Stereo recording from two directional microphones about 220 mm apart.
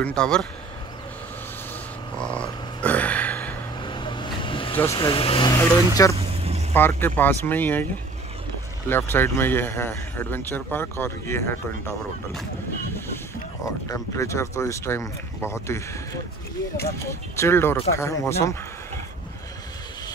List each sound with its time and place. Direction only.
0.0 s speech: 5° left (ahead or behind)
2.1 s a sound: 5° left (ahead or behind)
3.8 s vehicle: 20° left (ahead or behind)
4.7 s speech: 15° left (ahead or behind)
5.6 s speech: 15° left (ahead or behind)
6.1 s vehicle: 25° right (ahead or behind)
6.7 s speech: 10° left (ahead or behind)
12.9 s boat: 10° left (ahead or behind)
13.8 s speech: 15° left (ahead or behind)